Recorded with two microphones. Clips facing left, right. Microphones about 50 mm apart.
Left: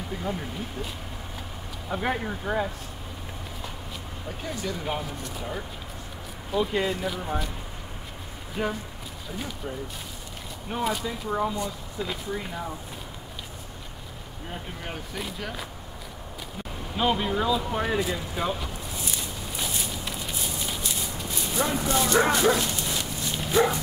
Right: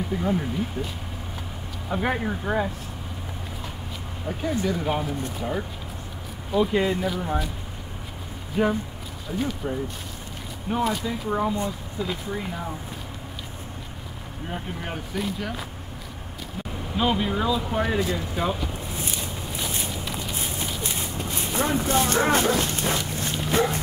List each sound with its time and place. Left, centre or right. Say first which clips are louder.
0.1 s speech: right 5 dB; centre
1.9 s speech: right 3 dB; centre
4.3 s speech: right 7 dB; centre
8.6 s speech: right 6 dB; centre
10.7 s speech: right 3 dB; centre
15.1 s speech: right 6 dB; centre
16.9 s speech: right 1 dB; centre
20.3 s a sound: right 2 dB; right
22.6 s dog: right 4 dB; right